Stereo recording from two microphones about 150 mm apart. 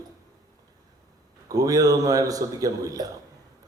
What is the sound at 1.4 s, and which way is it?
A man's voice, 25° right (ahead or behind).